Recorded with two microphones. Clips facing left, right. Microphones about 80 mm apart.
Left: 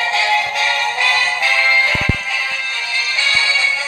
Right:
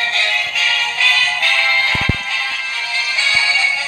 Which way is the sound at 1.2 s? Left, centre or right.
Centre.